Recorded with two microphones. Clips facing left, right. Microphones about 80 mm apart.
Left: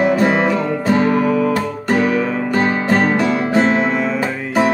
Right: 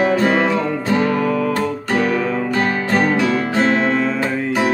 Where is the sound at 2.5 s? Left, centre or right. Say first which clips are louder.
Left 4 dB; left.